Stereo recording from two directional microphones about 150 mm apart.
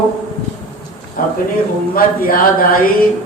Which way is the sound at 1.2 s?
70° left (ahead or behind).